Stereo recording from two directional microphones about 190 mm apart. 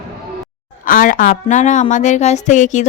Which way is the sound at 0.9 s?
45° left (ahead or behind).